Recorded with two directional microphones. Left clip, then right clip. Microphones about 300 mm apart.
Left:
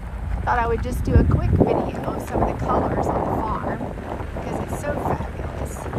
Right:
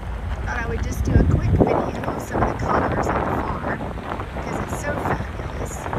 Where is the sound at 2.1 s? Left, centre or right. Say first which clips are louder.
Even; centre.